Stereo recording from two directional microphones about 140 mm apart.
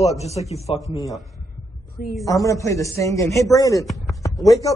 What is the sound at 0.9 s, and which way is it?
Speech, 25° left (ahead or behind).